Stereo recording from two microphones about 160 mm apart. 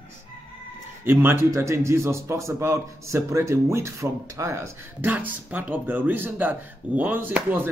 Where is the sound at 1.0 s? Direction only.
15° right (ahead or behind).